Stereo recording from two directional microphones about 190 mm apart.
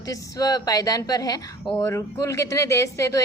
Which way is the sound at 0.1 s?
20° left (ahead or behind).